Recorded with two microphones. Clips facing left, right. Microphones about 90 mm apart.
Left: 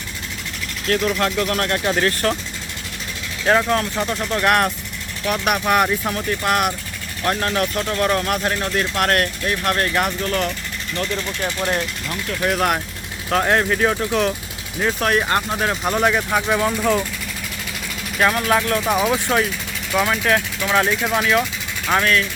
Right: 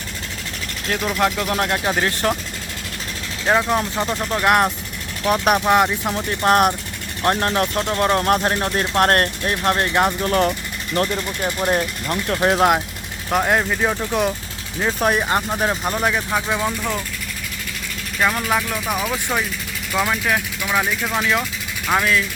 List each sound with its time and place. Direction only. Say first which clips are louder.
0.9 s speech: left 1 dB; 10° right (ahead or behind)
3.4 s speech: left 1 dB; 10° right (ahead or behind)
4.4 s speech: right 1 dB; 20° right (ahead or behind)
5.2 s speech: right 3 dB; 30° right (ahead or behind)
5.6 s speech: right 1 dB; 20° right (ahead or behind)
6.2 s speech: right 5 dB; 35° right (ahead or behind)
12.0 s speech: right 4 dB; 45° right (ahead or behind)
12.4 s speech: right 3 dB; 30° right (ahead or behind)
13.4 s speech: left 2 dB; 5° right (ahead or behind)
18.2 s speech: left 2 dB; centre (ahead or behind)